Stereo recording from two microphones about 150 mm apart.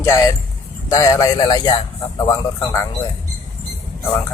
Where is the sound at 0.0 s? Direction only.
20° left (ahead or behind).